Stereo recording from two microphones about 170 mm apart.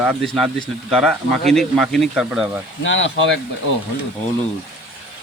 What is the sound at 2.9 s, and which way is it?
Speech, 90° left.